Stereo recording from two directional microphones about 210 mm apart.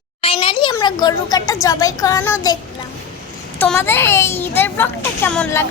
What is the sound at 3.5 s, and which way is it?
A child's voice, 10° left (ahead or behind).